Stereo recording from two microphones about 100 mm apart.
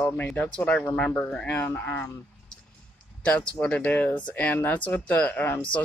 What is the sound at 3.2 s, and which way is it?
Speech, 10° left (ahead or behind).